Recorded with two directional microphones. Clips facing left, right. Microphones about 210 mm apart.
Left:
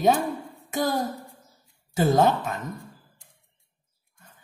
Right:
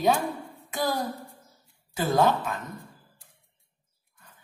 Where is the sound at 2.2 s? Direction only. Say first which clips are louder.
Right 2 dB; 45° left (ahead or behind).